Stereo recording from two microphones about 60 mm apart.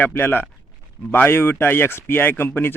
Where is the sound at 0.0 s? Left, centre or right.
Left.